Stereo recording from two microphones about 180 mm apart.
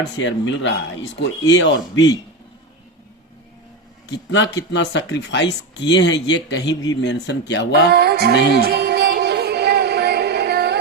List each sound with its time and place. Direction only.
0.2 s speech: 90° left
4.7 s speech: 80° left
7.9 s music: 65° right (ahead or behind)